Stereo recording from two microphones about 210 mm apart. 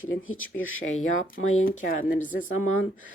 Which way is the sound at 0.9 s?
35° left (ahead or behind).